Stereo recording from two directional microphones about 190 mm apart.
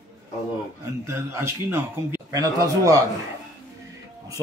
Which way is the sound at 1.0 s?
15° right (ahead or behind).